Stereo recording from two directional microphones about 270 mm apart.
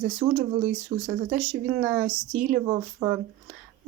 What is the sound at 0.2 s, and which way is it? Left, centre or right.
Speech, right.